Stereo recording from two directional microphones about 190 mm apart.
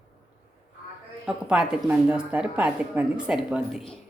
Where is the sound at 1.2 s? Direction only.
5° right (ahead or behind).